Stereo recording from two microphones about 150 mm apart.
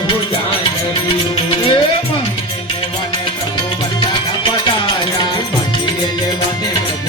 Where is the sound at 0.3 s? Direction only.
35° left (ahead or behind).